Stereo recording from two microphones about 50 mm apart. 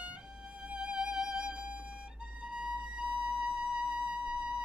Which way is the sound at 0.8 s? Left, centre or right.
Centre.